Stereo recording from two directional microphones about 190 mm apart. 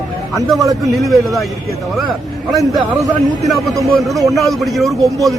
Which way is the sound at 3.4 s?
Centre (ahead or behind).